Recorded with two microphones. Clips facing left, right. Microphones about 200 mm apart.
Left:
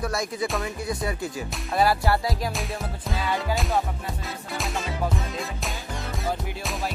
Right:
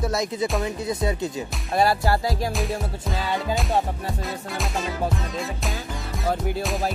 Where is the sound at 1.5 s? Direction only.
Centre (ahead or behind).